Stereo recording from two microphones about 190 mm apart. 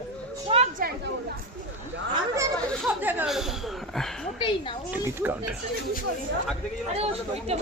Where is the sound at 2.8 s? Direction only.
10° right (ahead or behind).